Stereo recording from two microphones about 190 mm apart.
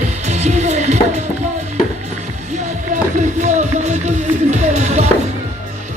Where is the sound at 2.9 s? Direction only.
40° right (ahead or behind).